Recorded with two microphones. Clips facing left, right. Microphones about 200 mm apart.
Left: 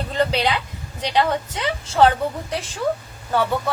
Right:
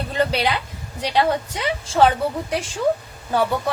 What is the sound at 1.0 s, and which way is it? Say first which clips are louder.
Speech: right 1 dB; 10° right (ahead or behind).